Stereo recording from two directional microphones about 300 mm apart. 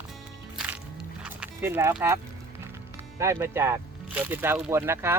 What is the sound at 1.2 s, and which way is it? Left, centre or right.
Dog, centre.